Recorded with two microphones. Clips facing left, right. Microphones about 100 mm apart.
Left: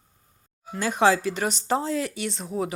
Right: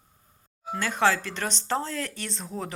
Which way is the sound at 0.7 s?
15° left (ahead or behind).